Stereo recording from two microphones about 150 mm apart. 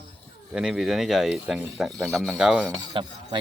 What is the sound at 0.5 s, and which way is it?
Speech, 5° right (ahead or behind).